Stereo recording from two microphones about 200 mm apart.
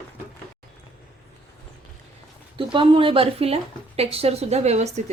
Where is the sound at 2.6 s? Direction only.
25° right (ahead or behind).